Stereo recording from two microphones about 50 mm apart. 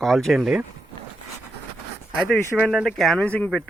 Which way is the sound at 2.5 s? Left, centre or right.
Centre.